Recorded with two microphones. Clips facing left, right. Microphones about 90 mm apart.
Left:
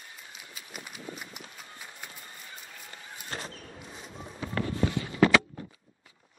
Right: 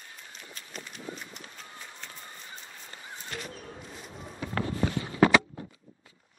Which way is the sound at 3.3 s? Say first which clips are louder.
Left 1 dB; 30° left (ahead or behind).